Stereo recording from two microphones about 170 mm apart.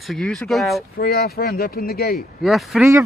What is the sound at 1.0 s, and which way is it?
Speech, 65° left (ahead or behind).